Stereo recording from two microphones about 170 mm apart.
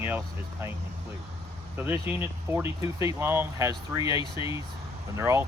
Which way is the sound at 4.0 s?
30° left (ahead or behind).